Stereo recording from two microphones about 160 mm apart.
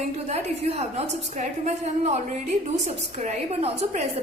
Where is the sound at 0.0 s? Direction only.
45° right (ahead or behind).